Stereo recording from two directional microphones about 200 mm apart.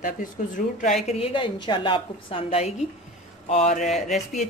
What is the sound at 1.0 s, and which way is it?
Speech, 30° left (ahead or behind).